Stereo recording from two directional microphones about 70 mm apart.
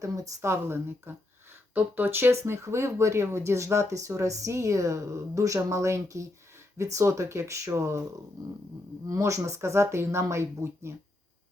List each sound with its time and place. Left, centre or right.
0.4 s a woman's voice: right
9.0 s speech: right